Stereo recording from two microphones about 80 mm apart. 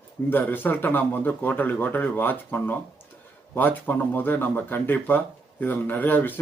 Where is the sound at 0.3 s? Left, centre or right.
Left.